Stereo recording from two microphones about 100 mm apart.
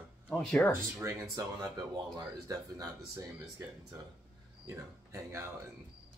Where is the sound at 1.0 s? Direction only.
30° right (ahead or behind).